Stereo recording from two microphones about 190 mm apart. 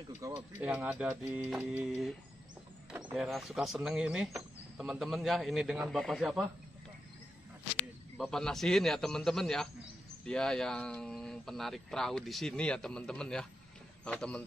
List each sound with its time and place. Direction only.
0.2 s speech: 15° right (ahead or behind)
0.6 s speech: 5° right (ahead or behind)
8.2 s speech: 5° left (ahead or behind)